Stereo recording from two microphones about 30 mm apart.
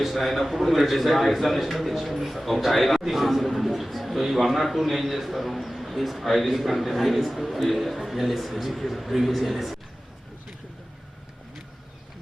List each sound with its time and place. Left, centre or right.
0.0 s a man's voice: centre